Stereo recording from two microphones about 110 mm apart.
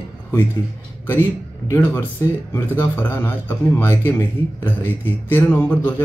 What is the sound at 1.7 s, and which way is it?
Speech, 20° left (ahead or behind).